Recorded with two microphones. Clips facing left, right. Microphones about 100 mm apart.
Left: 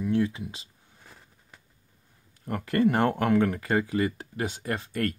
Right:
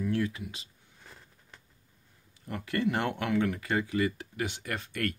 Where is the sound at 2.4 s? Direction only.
45° left (ahead or behind).